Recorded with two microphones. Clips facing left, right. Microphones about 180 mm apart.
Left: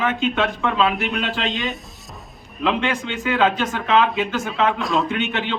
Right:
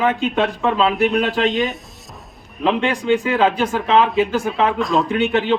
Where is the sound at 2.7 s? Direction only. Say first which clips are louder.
Right 5 dB; 35° right (ahead or behind).